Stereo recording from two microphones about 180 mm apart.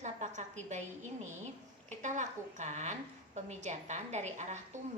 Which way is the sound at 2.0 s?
45° right (ahead or behind).